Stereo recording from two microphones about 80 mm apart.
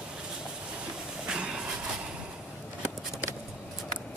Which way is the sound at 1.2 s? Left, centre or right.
Centre.